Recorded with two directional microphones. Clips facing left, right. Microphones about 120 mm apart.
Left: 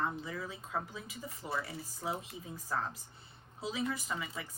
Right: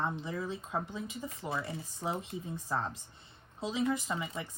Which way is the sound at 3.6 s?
30° right (ahead or behind).